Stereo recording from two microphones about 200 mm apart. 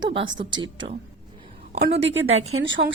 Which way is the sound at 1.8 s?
60° right (ahead or behind).